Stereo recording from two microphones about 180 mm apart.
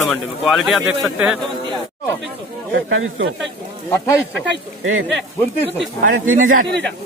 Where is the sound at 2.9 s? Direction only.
90° right.